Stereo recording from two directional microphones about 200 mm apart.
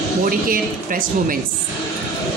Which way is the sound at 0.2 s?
45° right (ahead or behind).